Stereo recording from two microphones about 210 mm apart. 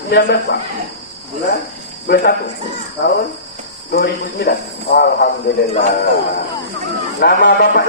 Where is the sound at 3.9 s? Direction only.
45° left (ahead or behind).